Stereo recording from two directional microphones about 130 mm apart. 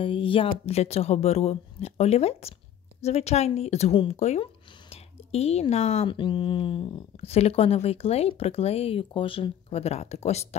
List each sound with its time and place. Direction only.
0.0 s a woman's voice: 40° left (ahead or behind)
6.0 s speech: 40° left (ahead or behind); by 10.5 s 55° left (ahead or behind)